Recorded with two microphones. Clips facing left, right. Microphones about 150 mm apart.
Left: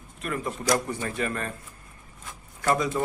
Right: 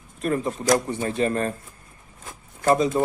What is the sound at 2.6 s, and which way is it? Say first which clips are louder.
Speech: right 5 dB; 25° right (ahead or behind).